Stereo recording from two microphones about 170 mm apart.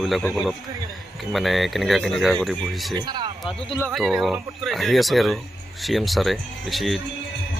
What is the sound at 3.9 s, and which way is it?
Speech, centre (ahead or behind).